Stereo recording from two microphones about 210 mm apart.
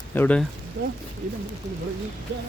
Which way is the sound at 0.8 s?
55° right (ahead or behind).